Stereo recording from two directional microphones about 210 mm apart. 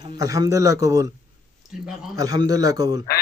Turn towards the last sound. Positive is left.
turn(degrees=-15)  # may be behind; listen again after turning